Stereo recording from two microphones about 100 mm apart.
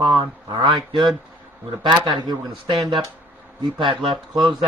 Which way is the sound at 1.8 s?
50° right (ahead or behind).